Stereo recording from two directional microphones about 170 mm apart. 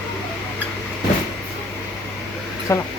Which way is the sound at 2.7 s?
15° left (ahead or behind).